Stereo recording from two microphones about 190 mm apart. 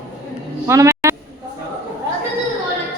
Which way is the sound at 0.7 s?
15° right (ahead or behind).